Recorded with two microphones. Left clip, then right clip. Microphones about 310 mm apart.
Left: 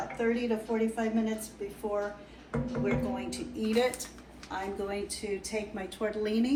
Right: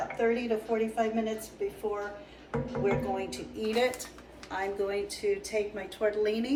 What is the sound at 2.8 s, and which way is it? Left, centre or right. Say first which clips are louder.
A woman's voice: right 4 dB; centre.